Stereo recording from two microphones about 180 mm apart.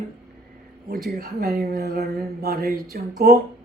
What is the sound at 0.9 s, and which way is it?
Speech, 55° right (ahead or behind).